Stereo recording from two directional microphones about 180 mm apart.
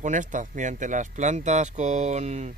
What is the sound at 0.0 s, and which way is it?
Speech, 45° right (ahead or behind).